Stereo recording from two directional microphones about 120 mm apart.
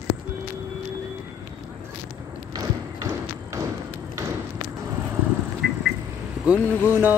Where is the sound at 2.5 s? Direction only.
30° right (ahead or behind).